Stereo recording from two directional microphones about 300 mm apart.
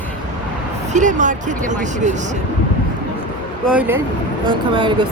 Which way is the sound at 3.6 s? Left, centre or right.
Centre.